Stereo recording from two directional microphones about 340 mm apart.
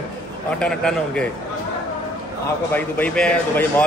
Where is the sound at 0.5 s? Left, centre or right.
Centre.